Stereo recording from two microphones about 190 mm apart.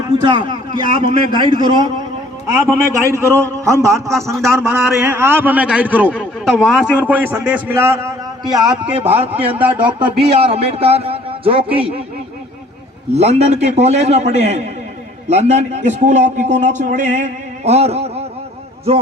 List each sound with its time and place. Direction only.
0.2 s a man's voice: 25° right (ahead or behind)
3.1 s a man's voice: 15° right (ahead or behind)
4.1 s a man's voice: centre (ahead or behind); by 9.1 s 30° right (ahead or behind)
9.3 s a man's voice: 10° right (ahead or behind)
10.1 s a man's voice: 30° right (ahead or behind)
13.1 s a man's voice: 35° right (ahead or behind)